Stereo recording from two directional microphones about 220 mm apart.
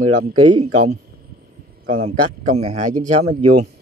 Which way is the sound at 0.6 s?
90° right.